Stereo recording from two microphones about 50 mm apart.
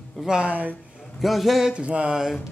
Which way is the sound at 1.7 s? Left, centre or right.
Right.